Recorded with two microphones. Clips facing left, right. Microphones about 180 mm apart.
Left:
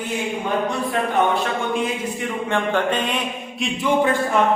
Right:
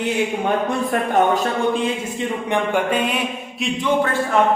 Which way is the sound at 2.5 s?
10° right (ahead or behind).